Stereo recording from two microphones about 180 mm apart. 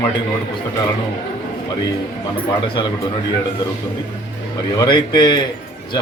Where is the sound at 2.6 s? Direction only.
25° left (ahead or behind).